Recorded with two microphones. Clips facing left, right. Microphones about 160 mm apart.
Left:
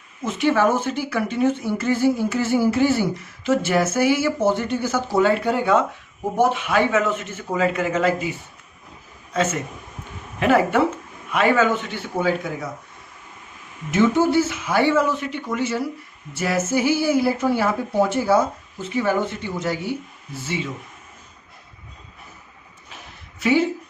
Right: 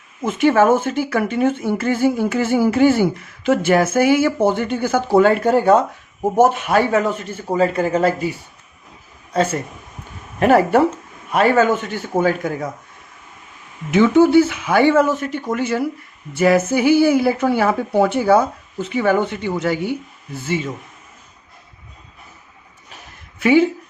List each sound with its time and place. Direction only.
0.3 s a man's voice: 50° right (ahead or behind)
13.9 s speech: 65° right (ahead or behind)
20.4 s a man's voice: 45° right (ahead or behind)
23.4 s speech: 60° right (ahead or behind)